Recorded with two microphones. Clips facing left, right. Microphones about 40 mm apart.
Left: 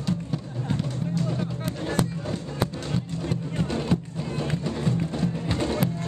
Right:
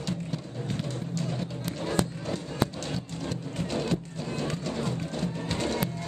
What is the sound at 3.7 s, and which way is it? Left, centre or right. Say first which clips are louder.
Music: left 1 dB; centre.